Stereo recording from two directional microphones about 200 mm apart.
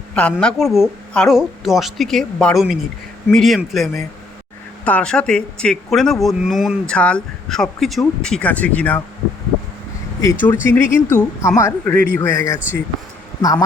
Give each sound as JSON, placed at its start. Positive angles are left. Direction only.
{"t": 0.2, "sound": "a man's voice", "side_deg": 5}
{"t": 10.4, "sound": "speech", "side_deg": 10}